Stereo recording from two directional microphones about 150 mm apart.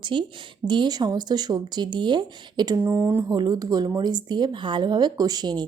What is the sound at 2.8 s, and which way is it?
Speech, 15° right (ahead or behind).